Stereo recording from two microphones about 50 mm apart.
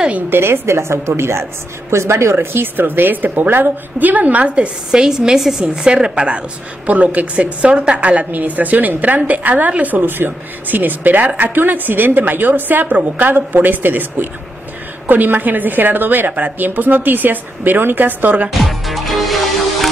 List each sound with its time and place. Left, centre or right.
0.3 s a woman's voice: right
4.9 s a woman's voice: centre; by 18.5 s right
18.5 s music: centre